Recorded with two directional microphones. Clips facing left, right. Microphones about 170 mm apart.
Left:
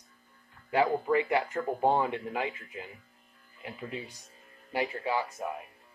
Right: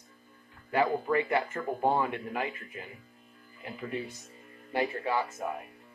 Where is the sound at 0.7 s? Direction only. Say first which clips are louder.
Left 1 dB; 15° left (ahead or behind).